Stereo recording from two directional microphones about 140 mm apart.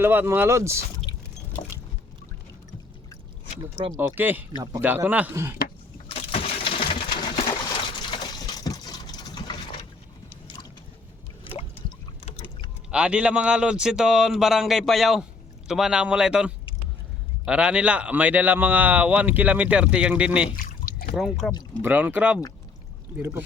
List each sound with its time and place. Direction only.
0.0 s speech: 15° right (ahead or behind)
1.1 s vehicle: 30° left (ahead or behind)
3.9 s speech: 15° right (ahead or behind)
4.5 s speech: 25° right (ahead or behind)
4.8 s speech: 15° right (ahead or behind)
6.1 s a sound: 40° left (ahead or behind)
7.6 s liquid: 30° left (ahead or behind)
12.9 s a man's voice: 5° right (ahead or behind)
20.7 s a sound: 90° left
21.2 s a man's voice: centre (ahead or behind)
21.8 s speech: 15° right (ahead or behind)